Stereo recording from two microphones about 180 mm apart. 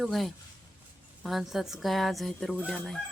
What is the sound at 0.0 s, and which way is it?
Fowl, centre (ahead or behind).